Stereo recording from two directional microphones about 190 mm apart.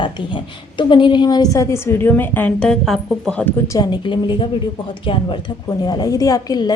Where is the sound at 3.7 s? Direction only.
25° left (ahead or behind).